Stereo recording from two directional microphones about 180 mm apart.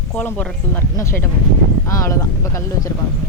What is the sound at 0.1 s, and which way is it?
Speech, 5° left (ahead or behind).